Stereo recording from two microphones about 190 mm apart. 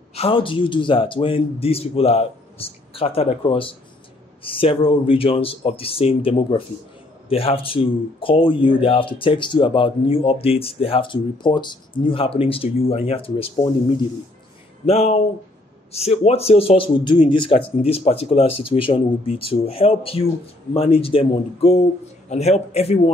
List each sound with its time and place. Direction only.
0.1 s speech: 30° left (ahead or behind)
14.9 s speech: 35° left (ahead or behind)